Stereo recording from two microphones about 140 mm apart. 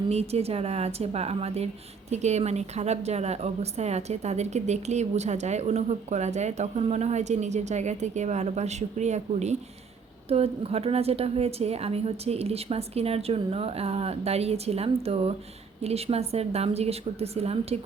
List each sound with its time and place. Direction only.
0.1 s speech: 50° right (ahead or behind)